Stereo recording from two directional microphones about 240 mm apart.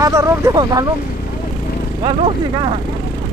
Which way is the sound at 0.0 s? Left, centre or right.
Centre.